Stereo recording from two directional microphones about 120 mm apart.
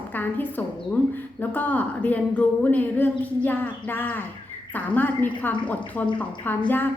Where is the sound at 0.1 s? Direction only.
15° left (ahead or behind).